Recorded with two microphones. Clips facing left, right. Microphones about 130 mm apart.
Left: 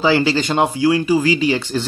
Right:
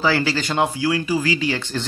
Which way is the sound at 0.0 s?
20° left (ahead or behind).